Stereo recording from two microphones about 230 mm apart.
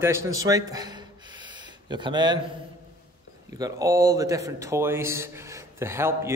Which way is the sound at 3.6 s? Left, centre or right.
Centre.